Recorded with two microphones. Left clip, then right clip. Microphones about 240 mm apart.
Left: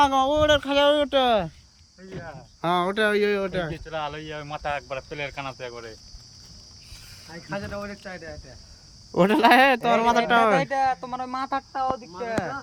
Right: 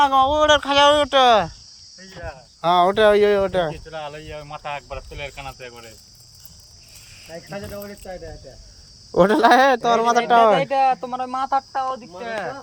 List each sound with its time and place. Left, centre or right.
0.0 s speech: centre
2.6 s speech: centre
3.8 s speech: centre
7.5 s speech: centre
10.2 s speech: centre
10.6 s speech: left